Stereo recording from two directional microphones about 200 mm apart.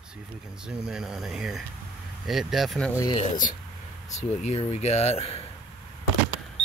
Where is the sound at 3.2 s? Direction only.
40° left (ahead or behind).